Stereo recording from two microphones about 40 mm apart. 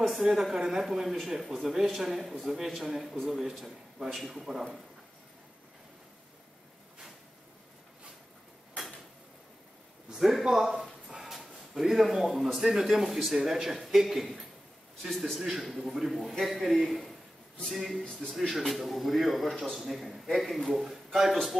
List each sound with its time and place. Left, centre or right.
0.0 s a man's voice: centre
10.1 s a man's voice: centre
18.0 s speech: centre
18.5 s a man's voice: centre
19.8 s a man's voice: centre